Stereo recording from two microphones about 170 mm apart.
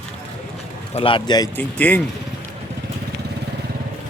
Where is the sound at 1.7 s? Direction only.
10° left (ahead or behind).